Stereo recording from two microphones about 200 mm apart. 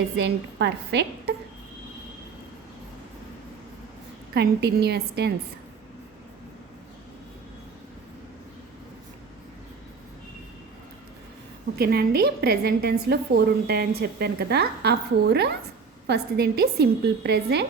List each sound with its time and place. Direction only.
0.2 s a woman's voice: 60° right (ahead or behind)
4.4 s a woman's voice: 55° right (ahead or behind)
11.8 s a woman's voice: 50° right (ahead or behind)